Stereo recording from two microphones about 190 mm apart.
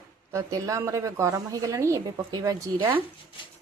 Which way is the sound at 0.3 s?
15° right (ahead or behind).